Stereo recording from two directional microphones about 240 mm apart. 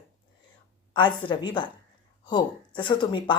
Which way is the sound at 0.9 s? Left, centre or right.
Centre.